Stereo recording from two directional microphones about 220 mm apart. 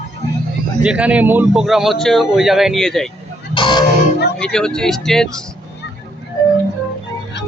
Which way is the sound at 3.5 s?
20° left (ahead or behind).